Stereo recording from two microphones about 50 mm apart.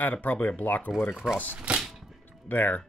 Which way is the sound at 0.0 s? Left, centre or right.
Left.